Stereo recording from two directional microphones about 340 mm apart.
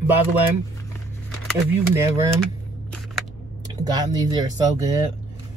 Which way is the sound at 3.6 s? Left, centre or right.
Centre.